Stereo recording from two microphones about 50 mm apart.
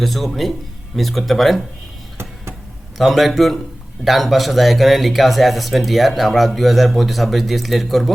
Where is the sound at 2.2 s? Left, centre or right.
Right.